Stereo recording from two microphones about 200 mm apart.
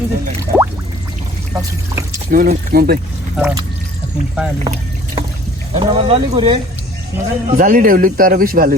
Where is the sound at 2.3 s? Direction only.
45° right (ahead or behind).